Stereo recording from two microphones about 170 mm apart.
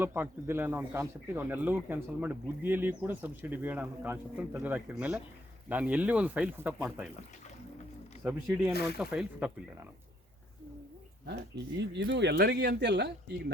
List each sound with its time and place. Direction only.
0.0 s speech: 10° right (ahead or behind)
8.2 s speech: 5° right (ahead or behind)
11.3 s speech: 90° right